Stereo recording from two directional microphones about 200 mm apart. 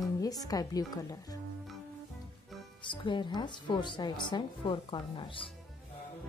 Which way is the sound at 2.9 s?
25° left (ahead or behind).